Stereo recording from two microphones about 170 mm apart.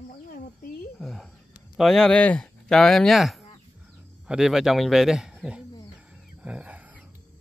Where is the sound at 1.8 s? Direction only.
Centre (ahead or behind).